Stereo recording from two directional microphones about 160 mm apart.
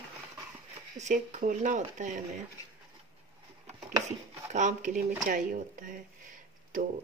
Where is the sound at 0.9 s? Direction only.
50° right (ahead or behind).